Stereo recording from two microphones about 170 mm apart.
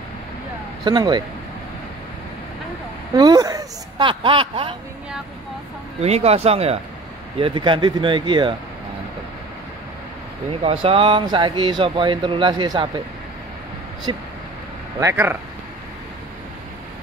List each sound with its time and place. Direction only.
0.8 s speech: 25° right (ahead or behind)
3.2 s speech: 20° right (ahead or behind)
5.9 s speech: 40° right (ahead or behind)
10.6 s speech: 35° right (ahead or behind)
14.1 s speech: 30° right (ahead or behind)
15.0 s speech: 15° right (ahead or behind)